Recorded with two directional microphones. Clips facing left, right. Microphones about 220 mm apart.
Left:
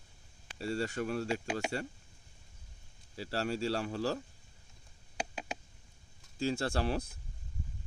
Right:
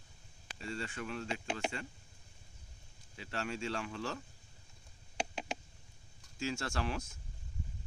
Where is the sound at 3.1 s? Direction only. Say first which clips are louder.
Left 5 dB; 35° left (ahead or behind).